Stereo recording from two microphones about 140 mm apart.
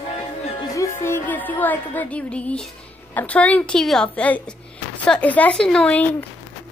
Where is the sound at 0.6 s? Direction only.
25° left (ahead or behind).